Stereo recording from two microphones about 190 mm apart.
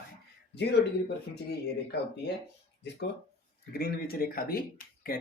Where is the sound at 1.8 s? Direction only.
60° left (ahead or behind).